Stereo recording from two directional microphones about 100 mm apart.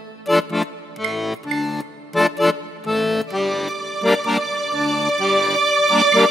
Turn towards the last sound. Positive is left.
turn(degrees=0)  # may be behind; listen again after turning